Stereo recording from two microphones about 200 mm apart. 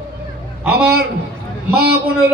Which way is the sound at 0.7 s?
50° right (ahead or behind).